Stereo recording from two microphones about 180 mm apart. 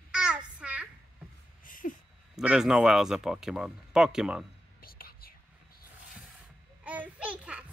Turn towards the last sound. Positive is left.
turn(degrees=-5)  # may be behind; listen again after turning